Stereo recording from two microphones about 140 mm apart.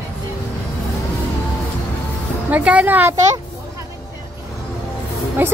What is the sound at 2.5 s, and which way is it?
Speech, 10° right (ahead or behind).